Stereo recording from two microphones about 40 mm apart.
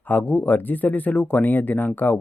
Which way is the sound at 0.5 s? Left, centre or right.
Left.